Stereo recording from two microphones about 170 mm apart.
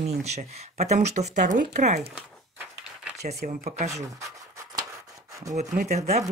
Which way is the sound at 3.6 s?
40° right (ahead or behind).